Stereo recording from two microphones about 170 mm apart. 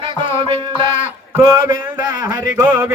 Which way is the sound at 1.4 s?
20° right (ahead or behind).